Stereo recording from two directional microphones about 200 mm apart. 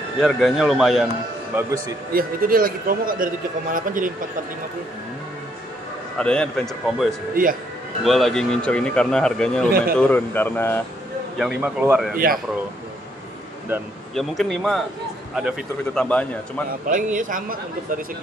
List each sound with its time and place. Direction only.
0.2 s speech: centre (ahead or behind)
1.5 s a man's voice: 10° right (ahead or behind)
2.1 s speech: 45° right (ahead or behind)
6.1 s speech: 5° left (ahead or behind)
9.7 s speech: 50° right (ahead or behind)
9.9 s speech: 10° left (ahead or behind)
11.3 s a man's voice: 5° right (ahead or behind)
14.1 s speech: centre (ahead or behind)
16.8 s speech: 40° right (ahead or behind)